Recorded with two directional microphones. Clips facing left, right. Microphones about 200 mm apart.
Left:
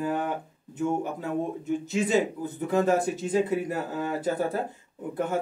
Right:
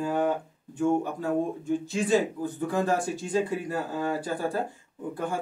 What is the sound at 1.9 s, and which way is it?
Speech, 20° left (ahead or behind).